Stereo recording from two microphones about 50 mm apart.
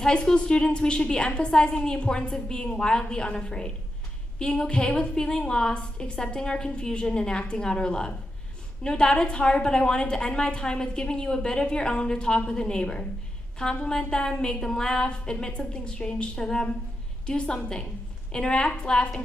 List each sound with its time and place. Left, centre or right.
0.0 s a woman's voice: centre